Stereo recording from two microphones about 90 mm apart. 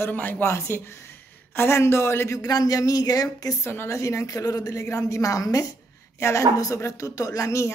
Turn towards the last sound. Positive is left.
turn(degrees=35)  # may be behind; listen again after turning